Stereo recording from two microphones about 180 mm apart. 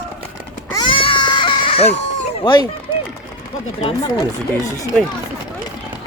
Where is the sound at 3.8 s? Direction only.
20° left (ahead or behind).